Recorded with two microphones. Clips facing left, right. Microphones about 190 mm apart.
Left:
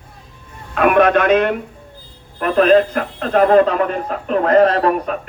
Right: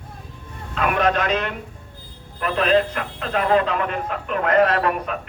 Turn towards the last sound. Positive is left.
turn(degrees=35)  # may be behind; listen again after turning